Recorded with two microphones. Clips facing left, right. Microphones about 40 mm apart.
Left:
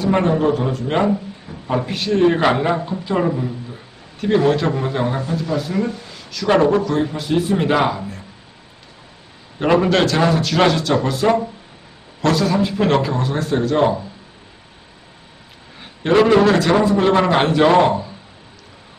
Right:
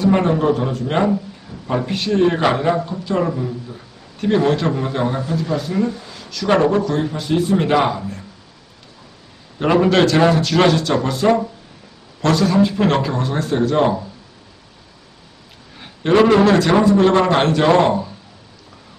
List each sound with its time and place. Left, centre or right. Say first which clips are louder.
0.0 s a man's voice: right 1 dB; centre
2.7 s speech: even; centre
4.2 s a man's voice: even; centre
9.6 s a man's voice: right 1 dB; centre
15.8 s a man's voice: right 1 dB; centre